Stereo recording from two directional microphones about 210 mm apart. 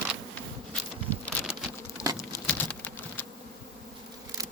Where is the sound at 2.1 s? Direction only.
10° left (ahead or behind).